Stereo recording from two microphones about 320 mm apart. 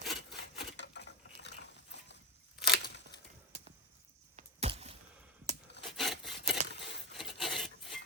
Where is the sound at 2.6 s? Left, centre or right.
Left.